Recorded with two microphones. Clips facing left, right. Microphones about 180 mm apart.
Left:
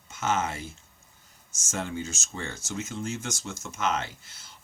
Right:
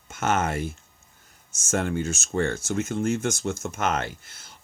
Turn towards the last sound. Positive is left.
turn(degrees=-55)  # may be behind; listen again after turning